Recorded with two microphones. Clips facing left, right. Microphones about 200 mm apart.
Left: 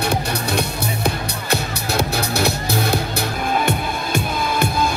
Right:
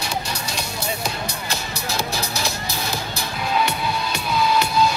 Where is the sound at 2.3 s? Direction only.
60° left (ahead or behind).